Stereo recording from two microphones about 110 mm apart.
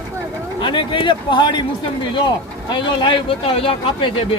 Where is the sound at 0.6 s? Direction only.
50° left (ahead or behind).